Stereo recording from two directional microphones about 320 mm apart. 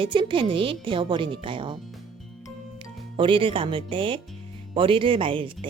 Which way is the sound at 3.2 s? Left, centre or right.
Centre.